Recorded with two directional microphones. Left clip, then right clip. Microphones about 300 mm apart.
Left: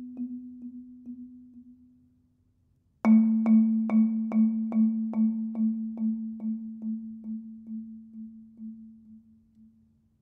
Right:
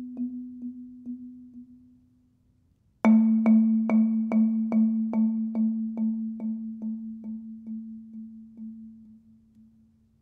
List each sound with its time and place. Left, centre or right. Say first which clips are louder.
3.0 s music: right 2 dB; right